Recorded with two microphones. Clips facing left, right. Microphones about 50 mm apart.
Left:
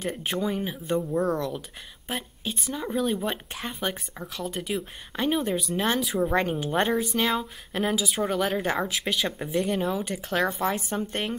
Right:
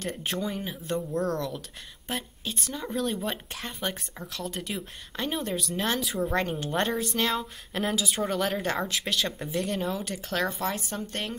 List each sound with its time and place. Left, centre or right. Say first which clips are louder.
0.0 s speech: left 3 dB; centre